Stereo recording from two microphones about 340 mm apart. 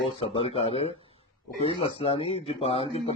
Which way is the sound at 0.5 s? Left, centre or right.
Centre.